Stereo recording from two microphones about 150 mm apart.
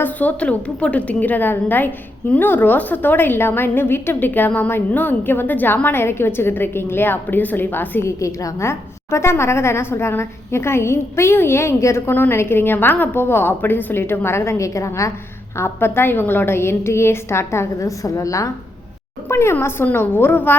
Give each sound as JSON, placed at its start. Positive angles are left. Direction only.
{"t": 0.0, "sound": "a woman's voice", "side_deg": 10}